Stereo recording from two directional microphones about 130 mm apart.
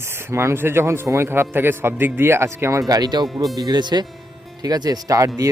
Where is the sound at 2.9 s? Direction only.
30° right (ahead or behind).